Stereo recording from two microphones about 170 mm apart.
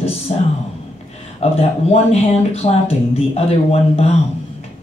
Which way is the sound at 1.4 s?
35° left (ahead or behind).